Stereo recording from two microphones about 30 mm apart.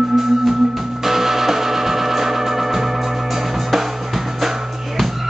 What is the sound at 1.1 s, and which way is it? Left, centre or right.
Music, centre.